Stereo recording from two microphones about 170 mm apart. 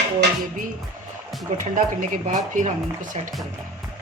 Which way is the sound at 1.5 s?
50° right (ahead or behind).